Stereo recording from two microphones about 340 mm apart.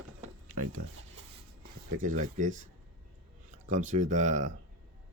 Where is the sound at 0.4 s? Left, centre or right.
Right.